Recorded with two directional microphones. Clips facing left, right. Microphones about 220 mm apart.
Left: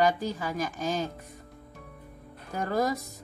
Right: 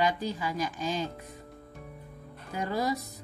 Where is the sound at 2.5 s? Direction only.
45° left (ahead or behind).